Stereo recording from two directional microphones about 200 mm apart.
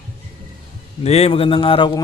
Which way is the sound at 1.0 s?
30° left (ahead or behind).